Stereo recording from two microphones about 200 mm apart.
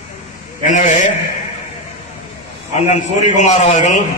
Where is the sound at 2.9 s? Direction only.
35° left (ahead or behind).